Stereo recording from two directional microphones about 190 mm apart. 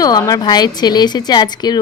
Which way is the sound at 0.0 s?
20° left (ahead or behind).